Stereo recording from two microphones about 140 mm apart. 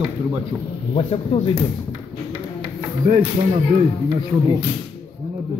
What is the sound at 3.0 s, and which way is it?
Speech, 70° right (ahead or behind).